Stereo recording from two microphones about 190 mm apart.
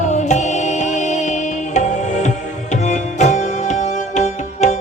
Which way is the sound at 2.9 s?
40° left (ahead or behind).